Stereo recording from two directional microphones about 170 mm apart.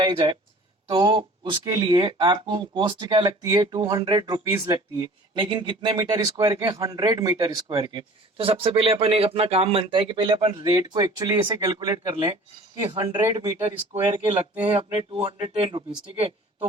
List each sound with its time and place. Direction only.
0.0 s speech: 30° right (ahead or behind)
13.7 s speech: 35° right (ahead or behind)